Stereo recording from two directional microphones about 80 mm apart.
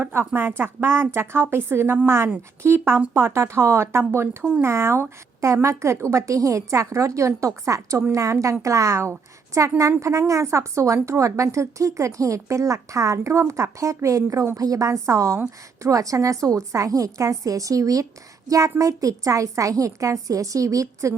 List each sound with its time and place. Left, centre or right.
0.0 s a woman's voice: right